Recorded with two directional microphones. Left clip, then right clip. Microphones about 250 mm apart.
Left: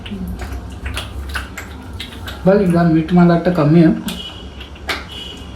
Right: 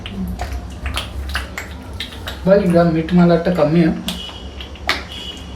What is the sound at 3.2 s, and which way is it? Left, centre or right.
Speech, left.